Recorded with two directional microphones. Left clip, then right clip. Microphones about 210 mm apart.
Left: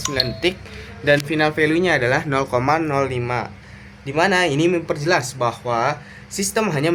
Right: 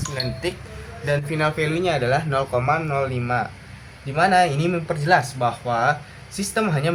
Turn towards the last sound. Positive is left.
turn(degrees=55)  # may be behind; listen again after turning